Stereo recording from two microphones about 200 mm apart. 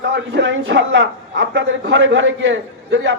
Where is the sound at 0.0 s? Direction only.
65° right (ahead or behind).